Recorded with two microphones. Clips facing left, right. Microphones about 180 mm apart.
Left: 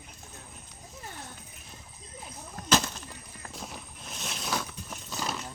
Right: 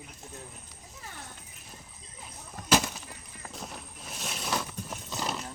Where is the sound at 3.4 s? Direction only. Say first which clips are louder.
Right 1 dB; centre (ahead or behind).